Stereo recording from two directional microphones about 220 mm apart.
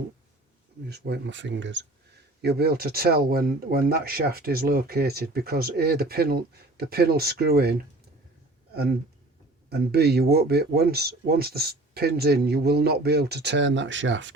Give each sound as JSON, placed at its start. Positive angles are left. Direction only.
{"t": 0.9, "sound": "speech", "side_deg": -50}